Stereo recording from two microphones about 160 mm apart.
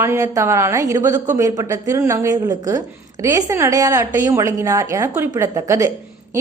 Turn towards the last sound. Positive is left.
turn(degrees=-20)  # may be behind; listen again after turning